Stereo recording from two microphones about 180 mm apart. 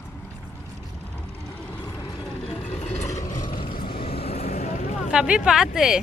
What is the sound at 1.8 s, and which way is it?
Vehicle, 20° left (ahead or behind).